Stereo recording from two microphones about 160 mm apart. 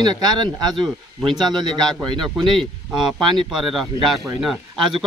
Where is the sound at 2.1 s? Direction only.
30° right (ahead or behind).